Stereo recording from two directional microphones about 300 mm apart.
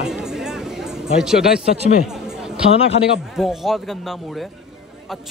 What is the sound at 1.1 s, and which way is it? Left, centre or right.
Speech, centre.